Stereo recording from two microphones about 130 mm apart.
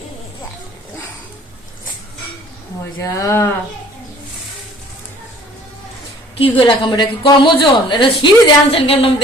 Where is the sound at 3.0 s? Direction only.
25° left (ahead or behind).